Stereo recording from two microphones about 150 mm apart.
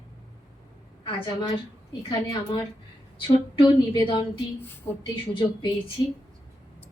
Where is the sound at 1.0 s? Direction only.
35° left (ahead or behind).